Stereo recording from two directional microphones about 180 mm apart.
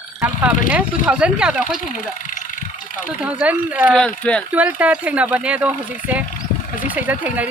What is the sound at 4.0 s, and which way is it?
Speech, 5° left (ahead or behind).